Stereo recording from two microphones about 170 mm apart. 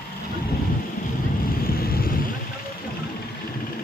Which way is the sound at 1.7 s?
60° left (ahead or behind).